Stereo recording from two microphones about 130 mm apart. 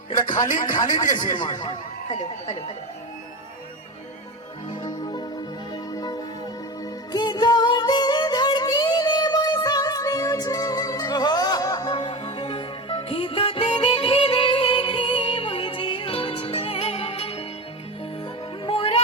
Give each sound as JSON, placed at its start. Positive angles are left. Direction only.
{"t": 0.4, "sound": "a man's voice", "side_deg": 85}
{"t": 1.1, "sound": "a man's voice", "side_deg": 35}
{"t": 2.0, "sound": "speech", "side_deg": 60}
{"t": 4.7, "sound": "music", "side_deg": 35}
{"t": 18.6, "sound": "music", "side_deg": 45}